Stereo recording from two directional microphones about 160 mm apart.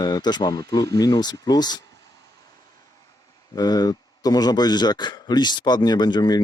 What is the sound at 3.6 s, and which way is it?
A man's voice, 25° left (ahead or behind).